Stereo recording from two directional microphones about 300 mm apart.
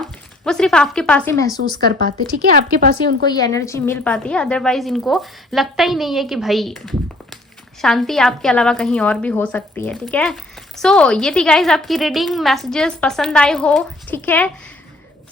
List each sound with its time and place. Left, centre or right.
0.0 s speech: centre
2.0 s speech: right
3.2 s a woman's voice: centre